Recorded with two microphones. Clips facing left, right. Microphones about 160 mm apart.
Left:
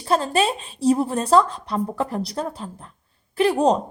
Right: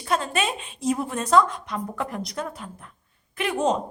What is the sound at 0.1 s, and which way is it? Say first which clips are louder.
A woman's voice: left 5 dB; 30° left (ahead or behind).